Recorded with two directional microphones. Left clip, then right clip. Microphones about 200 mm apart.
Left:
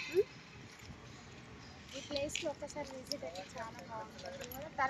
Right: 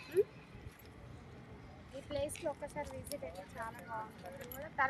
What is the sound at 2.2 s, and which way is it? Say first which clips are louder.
Speech: left 1 dB; 30° left (ahead or behind).